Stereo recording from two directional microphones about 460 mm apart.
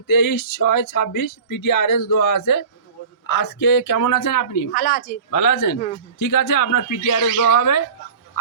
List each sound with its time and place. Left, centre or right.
0.1 s speech: left
4.7 s speech: centre
5.3 s speech: left